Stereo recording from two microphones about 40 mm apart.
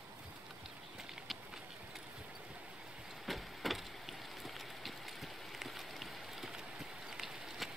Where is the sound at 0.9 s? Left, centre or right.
Centre.